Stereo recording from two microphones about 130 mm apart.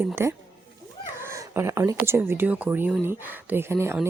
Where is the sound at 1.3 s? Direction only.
20° right (ahead or behind).